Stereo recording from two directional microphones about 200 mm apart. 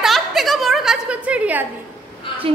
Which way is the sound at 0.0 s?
Centre (ahead or behind).